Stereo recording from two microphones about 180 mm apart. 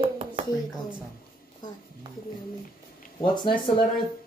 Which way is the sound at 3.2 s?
25° left (ahead or behind).